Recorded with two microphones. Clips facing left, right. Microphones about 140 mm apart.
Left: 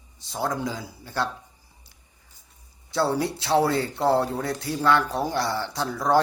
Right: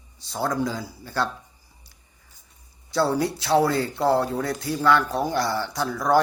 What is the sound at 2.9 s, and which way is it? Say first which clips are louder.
Speech: right 2 dB; 25° left (ahead or behind).